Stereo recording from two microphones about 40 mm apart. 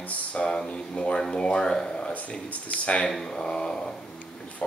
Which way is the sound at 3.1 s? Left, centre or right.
Centre.